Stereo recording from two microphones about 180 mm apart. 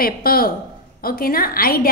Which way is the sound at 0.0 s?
55° left (ahead or behind).